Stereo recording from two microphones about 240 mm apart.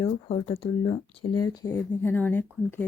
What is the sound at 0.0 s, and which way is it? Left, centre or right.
Speech, left.